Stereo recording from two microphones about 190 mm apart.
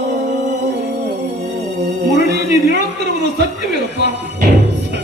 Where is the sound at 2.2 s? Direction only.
65° right (ahead or behind).